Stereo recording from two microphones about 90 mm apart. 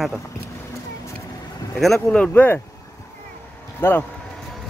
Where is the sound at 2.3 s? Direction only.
20° left (ahead or behind).